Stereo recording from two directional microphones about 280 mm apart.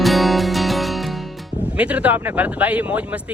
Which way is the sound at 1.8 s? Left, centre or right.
Centre.